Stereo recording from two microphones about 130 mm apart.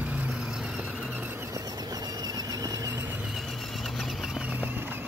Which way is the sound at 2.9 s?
15° right (ahead or behind).